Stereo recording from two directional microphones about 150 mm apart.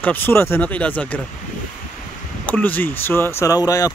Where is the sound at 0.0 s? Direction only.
15° left (ahead or behind).